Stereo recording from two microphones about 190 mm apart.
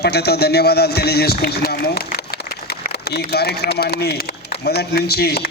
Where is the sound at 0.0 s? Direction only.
60° left (ahead or behind).